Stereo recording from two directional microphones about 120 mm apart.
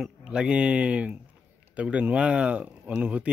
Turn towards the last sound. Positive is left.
turn(degrees=-10)  # may be behind; listen again after turning